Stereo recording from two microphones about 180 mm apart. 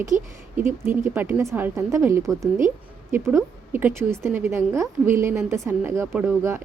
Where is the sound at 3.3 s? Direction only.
15° right (ahead or behind).